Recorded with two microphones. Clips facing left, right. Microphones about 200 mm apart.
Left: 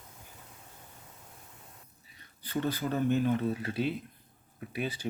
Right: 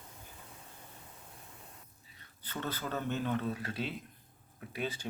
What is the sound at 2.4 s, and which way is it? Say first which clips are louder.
Speech: left 7 dB; 10° left (ahead or behind).